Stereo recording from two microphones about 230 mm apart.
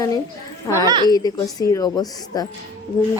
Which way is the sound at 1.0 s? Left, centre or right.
Centre.